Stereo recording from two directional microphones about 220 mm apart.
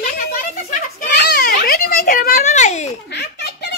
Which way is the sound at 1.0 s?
45° left (ahead or behind).